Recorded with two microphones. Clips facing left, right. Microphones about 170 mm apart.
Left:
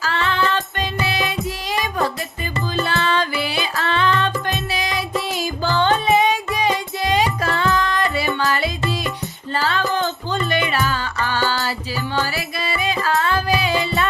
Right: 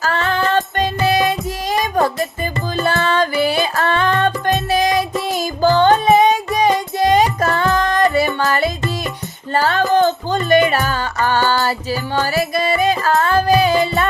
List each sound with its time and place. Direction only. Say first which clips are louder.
0.0 s music: right 3 dB; 45° right (ahead or behind)